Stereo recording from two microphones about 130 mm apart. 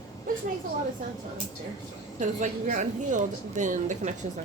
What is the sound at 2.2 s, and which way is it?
A woman's voice, 70° right (ahead or behind).